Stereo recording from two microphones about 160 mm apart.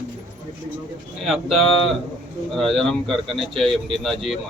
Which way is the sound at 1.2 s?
Centre (ahead or behind).